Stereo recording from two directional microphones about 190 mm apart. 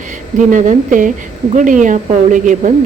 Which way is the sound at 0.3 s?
40° right (ahead or behind).